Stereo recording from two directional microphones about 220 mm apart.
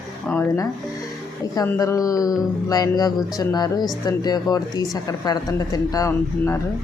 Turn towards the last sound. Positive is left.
turn(degrees=15)  # may be behind; listen again after turning